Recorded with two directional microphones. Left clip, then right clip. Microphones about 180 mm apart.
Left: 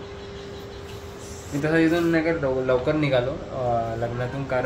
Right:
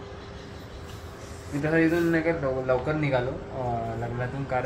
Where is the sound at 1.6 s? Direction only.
15° left (ahead or behind).